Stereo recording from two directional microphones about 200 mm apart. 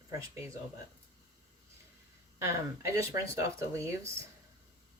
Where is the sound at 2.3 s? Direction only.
15° right (ahead or behind).